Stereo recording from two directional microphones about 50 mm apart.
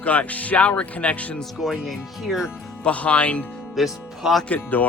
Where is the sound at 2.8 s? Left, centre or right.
Left.